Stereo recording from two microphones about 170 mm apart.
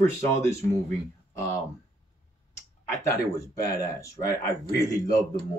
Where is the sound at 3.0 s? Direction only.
20° left (ahead or behind).